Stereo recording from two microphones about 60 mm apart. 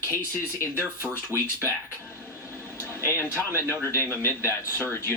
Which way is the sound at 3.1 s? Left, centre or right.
Left.